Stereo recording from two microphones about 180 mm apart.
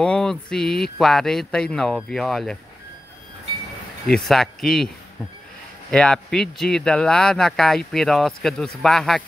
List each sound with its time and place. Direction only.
0.0 s speech: 5° left (ahead or behind)
4.1 s speech: centre (ahead or behind)